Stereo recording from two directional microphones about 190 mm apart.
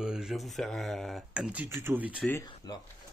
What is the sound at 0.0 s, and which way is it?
Speech, 5° right (ahead or behind).